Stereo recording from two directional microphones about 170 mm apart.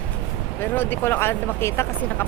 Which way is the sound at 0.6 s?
10° left (ahead or behind).